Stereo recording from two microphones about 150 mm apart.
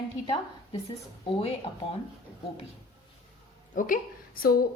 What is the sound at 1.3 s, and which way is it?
Speech, 40° left (ahead or behind).